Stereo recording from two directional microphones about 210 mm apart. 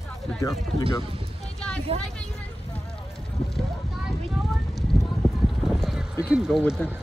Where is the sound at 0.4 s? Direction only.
15° left (ahead or behind).